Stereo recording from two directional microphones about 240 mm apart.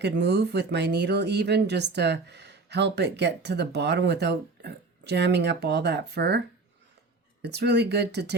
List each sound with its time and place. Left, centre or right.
0.0 s speech: right
7.4 s speech: right